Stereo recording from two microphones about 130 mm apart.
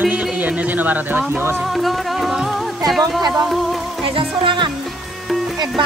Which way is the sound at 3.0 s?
30° right (ahead or behind).